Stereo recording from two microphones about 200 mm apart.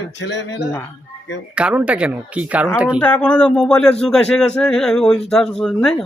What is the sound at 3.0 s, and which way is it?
A man's voice, 5° left (ahead or behind).